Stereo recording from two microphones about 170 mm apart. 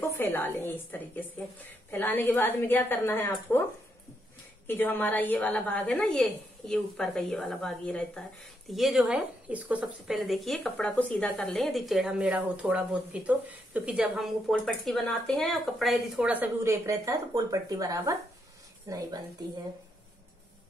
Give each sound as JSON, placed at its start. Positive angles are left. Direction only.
{"t": 0.2, "sound": "a woman's voice", "side_deg": 10}
{"t": 4.6, "sound": "a woman's voice", "side_deg": 10}